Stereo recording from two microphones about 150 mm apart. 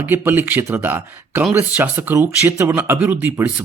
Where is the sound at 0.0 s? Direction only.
15° right (ahead or behind).